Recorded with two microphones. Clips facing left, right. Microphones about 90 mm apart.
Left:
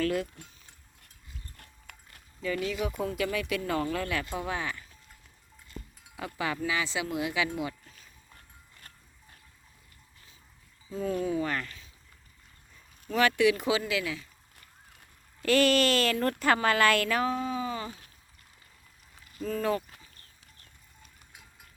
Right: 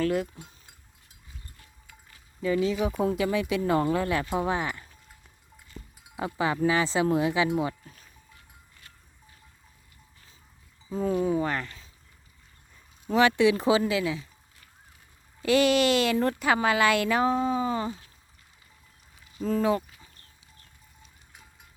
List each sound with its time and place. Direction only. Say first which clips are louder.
0.0 s speech: right 3 dB; 20° right (ahead or behind)
1.5 s a sound: left 2 dB; 60° left (ahead or behind)
2.4 s speech: right 6 dB; 25° right (ahead or behind)
6.1 s speech: right 5 dB; 25° right (ahead or behind)
10.8 s speech: right 4 dB; 30° right (ahead or behind)
13.1 s speech: right 3 dB; 25° right (ahead or behind)
15.4 s speech: right 2 dB; 15° right (ahead or behind)
19.5 s speech: right 4 dB; 20° right (ahead or behind)